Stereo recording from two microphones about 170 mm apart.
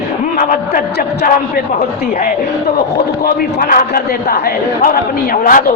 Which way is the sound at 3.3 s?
55° left (ahead or behind).